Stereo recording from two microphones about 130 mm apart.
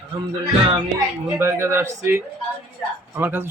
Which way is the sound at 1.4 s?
20° right (ahead or behind).